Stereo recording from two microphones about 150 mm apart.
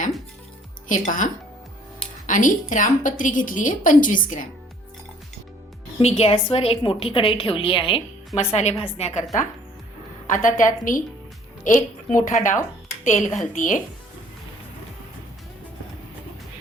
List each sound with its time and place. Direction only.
0.9 s a woman's voice: 60° left (ahead or behind)
6.0 s a woman's voice: 45° left (ahead or behind)
8.4 s a woman's voice: 45° left (ahead or behind)
10.2 s a woman's voice: 60° left (ahead or behind)